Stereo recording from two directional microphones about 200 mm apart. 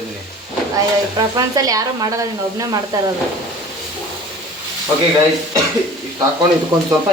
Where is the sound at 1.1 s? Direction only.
15° right (ahead or behind).